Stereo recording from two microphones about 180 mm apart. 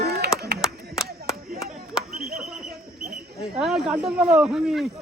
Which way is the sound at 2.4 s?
Centre (ahead or behind).